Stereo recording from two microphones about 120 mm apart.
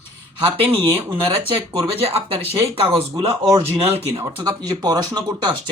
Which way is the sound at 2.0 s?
55° right (ahead or behind).